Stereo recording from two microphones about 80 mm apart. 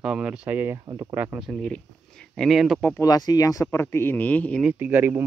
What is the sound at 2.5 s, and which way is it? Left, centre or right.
Speech, centre.